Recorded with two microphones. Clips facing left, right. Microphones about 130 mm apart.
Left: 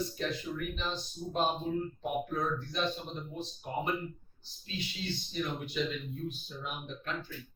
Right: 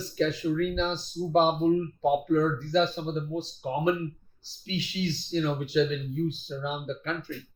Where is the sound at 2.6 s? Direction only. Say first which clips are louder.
Right 9 dB; 90° right.